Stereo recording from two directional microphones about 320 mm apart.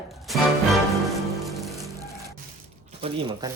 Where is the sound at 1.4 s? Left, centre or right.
Centre.